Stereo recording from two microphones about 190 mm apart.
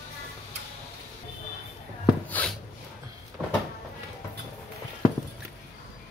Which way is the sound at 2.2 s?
10° left (ahead or behind).